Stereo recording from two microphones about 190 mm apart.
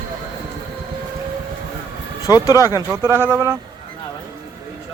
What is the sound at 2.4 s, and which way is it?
Speech, 20° left (ahead or behind).